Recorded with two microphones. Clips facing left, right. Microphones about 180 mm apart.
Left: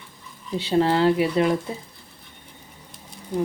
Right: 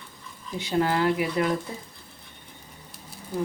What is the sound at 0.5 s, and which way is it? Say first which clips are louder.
Speech: left 4 dB; 30° left (ahead or behind).